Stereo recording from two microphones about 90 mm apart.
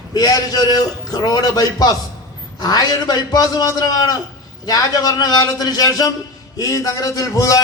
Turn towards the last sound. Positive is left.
turn(degrees=40)  # may be behind; listen again after turning